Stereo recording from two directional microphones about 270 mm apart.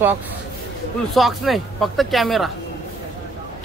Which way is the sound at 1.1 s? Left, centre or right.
Centre.